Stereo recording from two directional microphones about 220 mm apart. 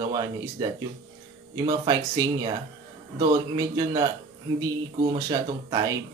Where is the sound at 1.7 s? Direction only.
15° right (ahead or behind).